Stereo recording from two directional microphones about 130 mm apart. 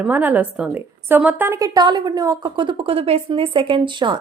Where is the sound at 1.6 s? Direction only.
30° right (ahead or behind).